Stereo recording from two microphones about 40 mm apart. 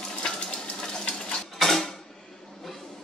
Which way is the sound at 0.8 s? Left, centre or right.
Centre.